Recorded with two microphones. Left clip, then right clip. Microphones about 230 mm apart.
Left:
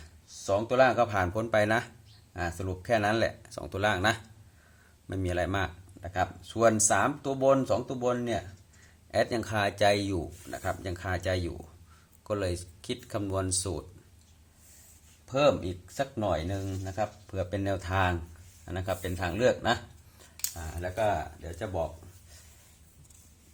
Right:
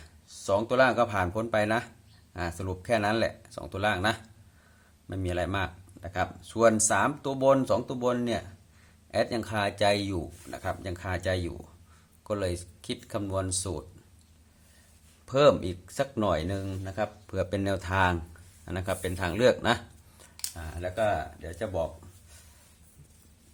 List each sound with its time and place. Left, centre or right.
0.0 s speech: centre
9.1 s speech: centre
15.3 s speech: right